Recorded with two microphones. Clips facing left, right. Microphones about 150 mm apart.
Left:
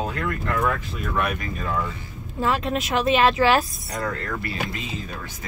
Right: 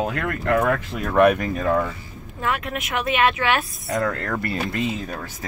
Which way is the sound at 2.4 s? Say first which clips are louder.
Left 3 dB; 30° left (ahead or behind).